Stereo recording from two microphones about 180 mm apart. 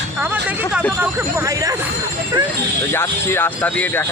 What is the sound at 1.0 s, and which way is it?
Speech, 15° right (ahead or behind).